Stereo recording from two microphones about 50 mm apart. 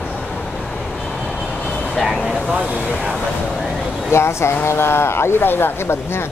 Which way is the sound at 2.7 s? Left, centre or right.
Right.